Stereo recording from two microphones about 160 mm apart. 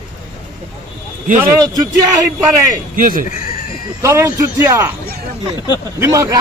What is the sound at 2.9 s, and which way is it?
Speech, 60° right (ahead or behind).